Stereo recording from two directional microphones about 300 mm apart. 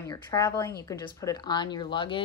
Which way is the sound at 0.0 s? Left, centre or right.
Centre.